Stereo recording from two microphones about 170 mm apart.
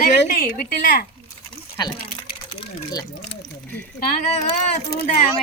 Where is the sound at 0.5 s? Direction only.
55° left (ahead or behind).